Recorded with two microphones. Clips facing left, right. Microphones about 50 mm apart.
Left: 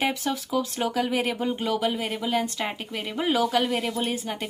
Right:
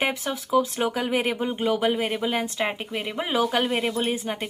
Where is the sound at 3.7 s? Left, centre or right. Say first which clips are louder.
Right 2 dB; right.